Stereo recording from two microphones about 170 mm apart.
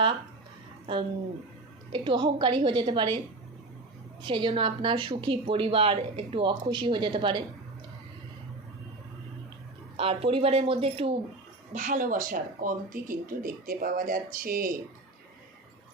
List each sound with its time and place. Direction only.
1.9 s a woman's voice: 30° right (ahead or behind)
4.2 s a woman's voice: 30° right (ahead or behind)
10.0 s speech: 35° right (ahead or behind)
11.7 s speech: 50° right (ahead or behind)